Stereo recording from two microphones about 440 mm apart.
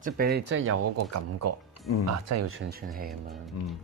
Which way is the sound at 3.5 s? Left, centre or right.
Left.